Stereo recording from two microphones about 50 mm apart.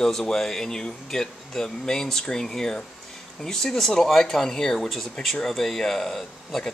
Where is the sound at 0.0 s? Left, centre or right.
Centre.